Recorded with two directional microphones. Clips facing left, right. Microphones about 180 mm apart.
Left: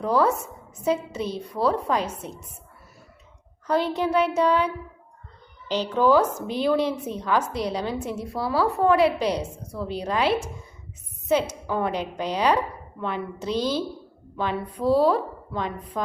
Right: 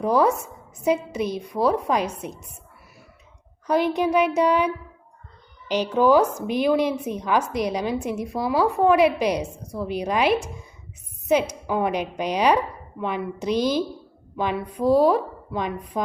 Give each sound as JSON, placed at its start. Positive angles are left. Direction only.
{"t": 0.0, "sound": "a woman's voice", "side_deg": -15}
{"t": 3.7, "sound": "a woman's voice", "side_deg": -15}